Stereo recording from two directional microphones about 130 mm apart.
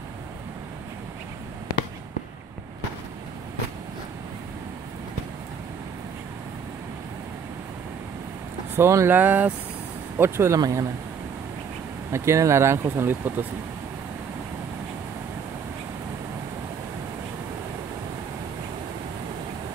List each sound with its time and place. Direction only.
8.7 s speech: 20° right (ahead or behind)
12.1 s speech: 20° right (ahead or behind)